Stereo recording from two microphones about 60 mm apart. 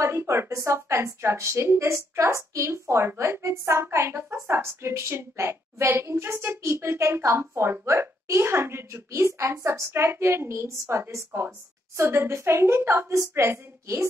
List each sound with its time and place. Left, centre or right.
0.0 s a woman's voice: right